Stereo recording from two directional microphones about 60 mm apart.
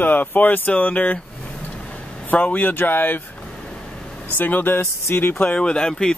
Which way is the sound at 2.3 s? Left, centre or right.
Left.